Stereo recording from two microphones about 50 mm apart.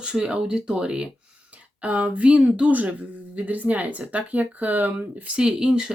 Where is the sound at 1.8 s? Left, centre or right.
Right.